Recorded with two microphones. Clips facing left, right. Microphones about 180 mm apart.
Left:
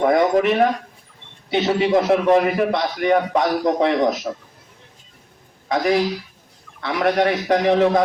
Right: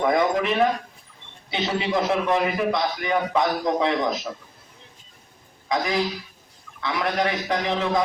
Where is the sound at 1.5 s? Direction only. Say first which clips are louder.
Left 7 dB; 45° left (ahead or behind).